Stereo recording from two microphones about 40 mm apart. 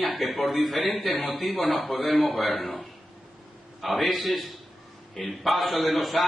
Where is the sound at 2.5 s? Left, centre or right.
Left.